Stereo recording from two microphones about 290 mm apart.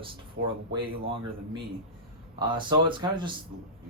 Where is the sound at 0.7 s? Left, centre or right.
Centre.